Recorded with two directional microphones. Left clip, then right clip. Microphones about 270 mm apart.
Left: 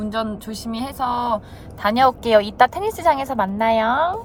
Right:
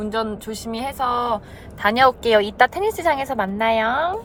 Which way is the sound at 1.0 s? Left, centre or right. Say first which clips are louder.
Even; centre.